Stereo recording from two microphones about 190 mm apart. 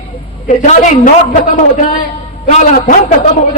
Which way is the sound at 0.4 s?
40° left (ahead or behind).